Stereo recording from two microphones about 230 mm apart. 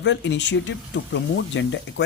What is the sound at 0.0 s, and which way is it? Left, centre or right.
A woman's voice, left.